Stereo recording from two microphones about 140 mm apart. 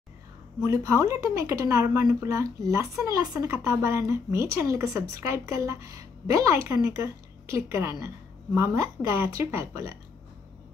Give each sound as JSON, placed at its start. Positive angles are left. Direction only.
{"t": 0.7, "sound": "speech", "side_deg": -20}